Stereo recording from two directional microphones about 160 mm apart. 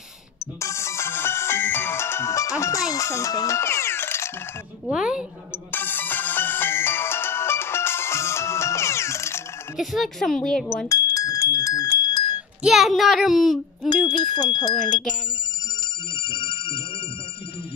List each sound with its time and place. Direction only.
0.6 s music: 20° left (ahead or behind)
4.8 s speech: 5° right (ahead or behind)
5.7 s music: 10° left (ahead or behind)
9.8 s speech: centre (ahead or behind)
10.9 s a sound: 20° left (ahead or behind)
12.6 s speech: centre (ahead or behind)
14.0 s speech: 25° left (ahead or behind)
16.2 s telephone bell ringing: 30° left (ahead or behind)